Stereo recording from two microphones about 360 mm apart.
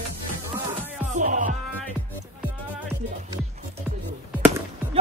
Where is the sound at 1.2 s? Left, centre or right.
Right.